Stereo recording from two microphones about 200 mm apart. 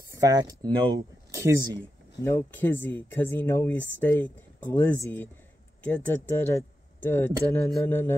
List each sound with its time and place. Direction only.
0.1 s speech: 20° right (ahead or behind)
1.8 s speech: 10° left (ahead or behind)